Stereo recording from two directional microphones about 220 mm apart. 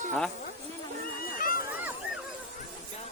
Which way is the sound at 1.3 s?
40° left (ahead or behind).